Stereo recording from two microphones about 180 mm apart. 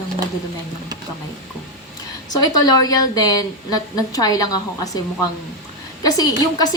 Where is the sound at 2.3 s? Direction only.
20° left (ahead or behind).